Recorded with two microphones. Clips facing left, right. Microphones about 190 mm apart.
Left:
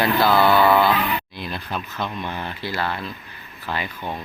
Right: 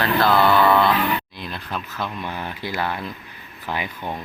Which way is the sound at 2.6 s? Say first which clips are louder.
Even; 15° right (ahead or behind).